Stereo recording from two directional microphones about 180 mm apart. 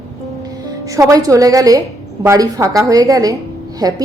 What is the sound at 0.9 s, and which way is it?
A woman's voice, 20° right (ahead or behind).